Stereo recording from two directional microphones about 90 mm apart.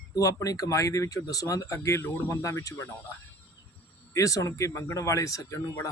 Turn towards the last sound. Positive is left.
turn(degrees=40)  # may be behind; listen again after turning